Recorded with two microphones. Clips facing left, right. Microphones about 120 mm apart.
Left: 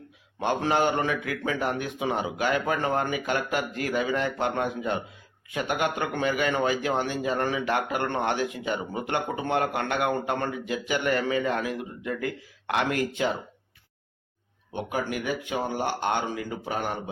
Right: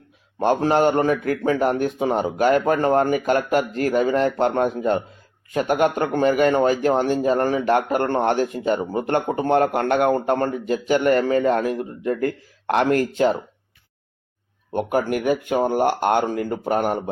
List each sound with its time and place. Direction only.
0.3 s speech: 45° right (ahead or behind)
14.7 s speech: 50° right (ahead or behind)